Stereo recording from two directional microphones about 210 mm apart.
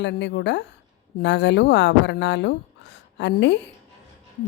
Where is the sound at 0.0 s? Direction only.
55° left (ahead or behind).